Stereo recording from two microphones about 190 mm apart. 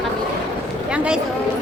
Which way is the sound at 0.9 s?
5° right (ahead or behind).